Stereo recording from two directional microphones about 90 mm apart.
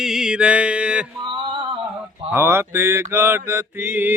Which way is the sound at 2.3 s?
25° right (ahead or behind).